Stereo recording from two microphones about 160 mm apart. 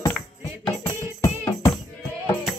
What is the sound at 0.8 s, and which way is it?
Music, 20° left (ahead or behind).